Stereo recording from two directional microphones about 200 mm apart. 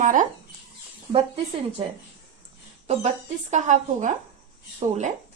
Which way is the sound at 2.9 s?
35° right (ahead or behind).